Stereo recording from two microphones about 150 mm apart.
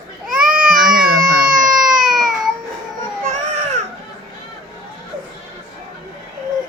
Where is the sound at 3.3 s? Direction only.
50° right (ahead or behind).